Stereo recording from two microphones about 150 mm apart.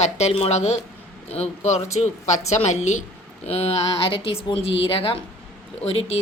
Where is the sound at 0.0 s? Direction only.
45° left (ahead or behind).